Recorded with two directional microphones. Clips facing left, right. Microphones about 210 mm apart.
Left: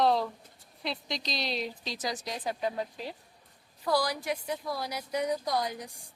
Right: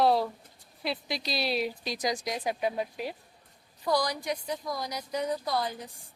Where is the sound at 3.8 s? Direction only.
5° left (ahead or behind).